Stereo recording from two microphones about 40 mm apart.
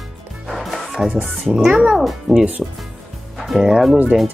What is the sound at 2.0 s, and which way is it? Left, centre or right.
Speech, centre.